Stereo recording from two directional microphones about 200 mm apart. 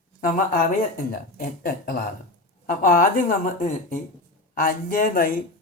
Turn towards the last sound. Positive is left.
turn(degrees=40)  # may be behind; listen again after turning